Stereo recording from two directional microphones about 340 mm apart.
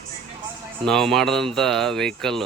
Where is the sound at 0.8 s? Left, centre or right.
Centre.